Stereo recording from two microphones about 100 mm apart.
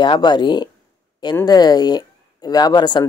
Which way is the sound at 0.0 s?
50° left (ahead or behind).